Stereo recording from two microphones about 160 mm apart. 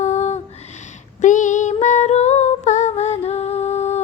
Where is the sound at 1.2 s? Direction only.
50° left (ahead or behind).